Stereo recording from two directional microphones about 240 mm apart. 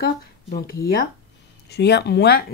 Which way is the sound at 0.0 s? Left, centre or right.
Left.